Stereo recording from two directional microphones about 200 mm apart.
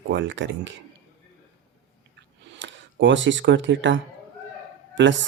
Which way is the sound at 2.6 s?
65° right (ahead or behind).